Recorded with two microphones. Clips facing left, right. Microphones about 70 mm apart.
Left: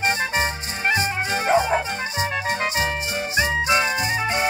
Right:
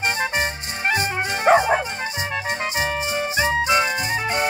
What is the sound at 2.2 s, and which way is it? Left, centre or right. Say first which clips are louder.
Music: left 2 dB; centre.